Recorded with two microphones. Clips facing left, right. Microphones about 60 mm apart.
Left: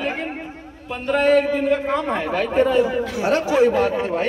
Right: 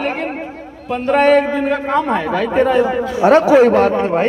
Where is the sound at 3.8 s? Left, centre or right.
Right.